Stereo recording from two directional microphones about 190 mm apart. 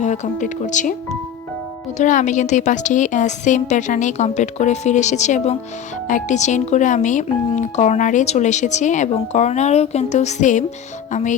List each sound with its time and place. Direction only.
0.0 s speech: 40° left (ahead or behind)
2.0 s speech: 40° left (ahead or behind)